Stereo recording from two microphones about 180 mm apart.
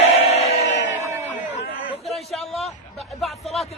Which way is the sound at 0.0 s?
35° left (ahead or behind).